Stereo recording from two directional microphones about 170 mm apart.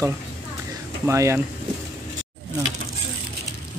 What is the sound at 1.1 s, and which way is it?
Speech, 15° right (ahead or behind).